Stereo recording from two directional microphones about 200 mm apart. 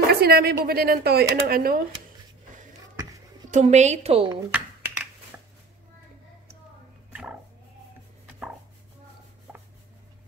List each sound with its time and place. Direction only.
0.1 s a sound: 50° right (ahead or behind)
0.7 s speech: 50° right (ahead or behind)
3.0 s a sound: 15° right (ahead or behind)
3.4 s a woman's voice: 35° right (ahead or behind)
4.5 s finger snapping: 5° right (ahead or behind)
7.1 s music: 5° right (ahead or behind)